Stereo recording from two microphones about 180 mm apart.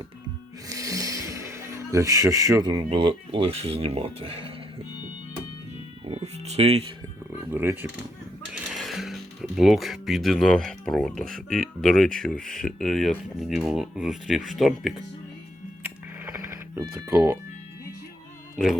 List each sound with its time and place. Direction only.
0.7 s speech: 20° right (ahead or behind)
6.1 s speech: 35° right (ahead or behind)
7.5 s speech: 10° right (ahead or behind)
15.8 s music: 10° right (ahead or behind)
18.5 s speech: centre (ahead or behind)